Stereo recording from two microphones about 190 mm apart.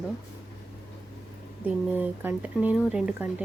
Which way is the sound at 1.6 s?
10° right (ahead or behind).